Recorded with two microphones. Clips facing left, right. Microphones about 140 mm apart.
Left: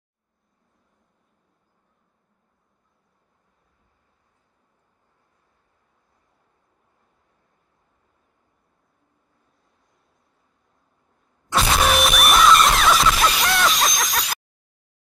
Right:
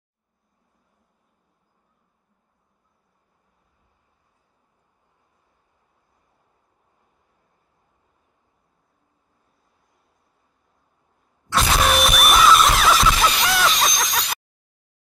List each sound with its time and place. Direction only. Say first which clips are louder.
11.5 s music: even; centre (ahead or behind)